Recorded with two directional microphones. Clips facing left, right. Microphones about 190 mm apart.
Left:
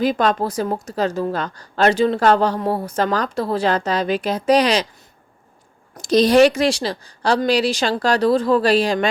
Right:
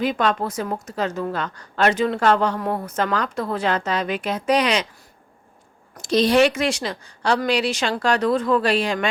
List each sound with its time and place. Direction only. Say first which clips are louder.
0.0 s a woman's voice: left 3 dB; 35° left (ahead or behind)
6.0 s a woman's voice: left 4 dB; 40° left (ahead or behind)